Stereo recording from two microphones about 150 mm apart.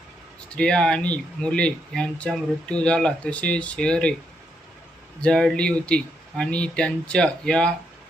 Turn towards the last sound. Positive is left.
turn(degrees=5)  # may be behind; listen again after turning